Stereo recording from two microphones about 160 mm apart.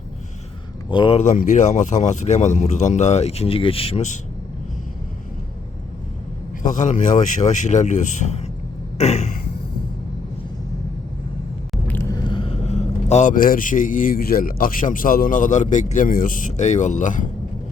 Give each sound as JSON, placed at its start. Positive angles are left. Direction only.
{"t": 0.9, "sound": "speech", "side_deg": 30}
{"t": 1.2, "sound": "speech", "side_deg": 50}
{"t": 6.6, "sound": "speech", "side_deg": 50}
{"t": 9.0, "sound": "a sound", "side_deg": 45}
{"t": 11.9, "sound": "vehicle", "side_deg": 15}
{"t": 12.1, "sound": "speech", "side_deg": 30}